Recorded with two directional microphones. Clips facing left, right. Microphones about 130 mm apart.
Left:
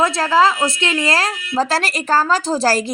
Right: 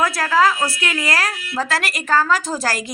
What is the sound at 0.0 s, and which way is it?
A woman's voice, 25° left (ahead or behind).